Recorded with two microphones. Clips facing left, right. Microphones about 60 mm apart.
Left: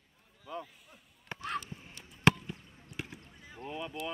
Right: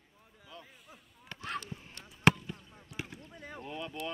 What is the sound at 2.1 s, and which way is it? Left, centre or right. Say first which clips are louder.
Basketball bounce: right 1 dB; centre.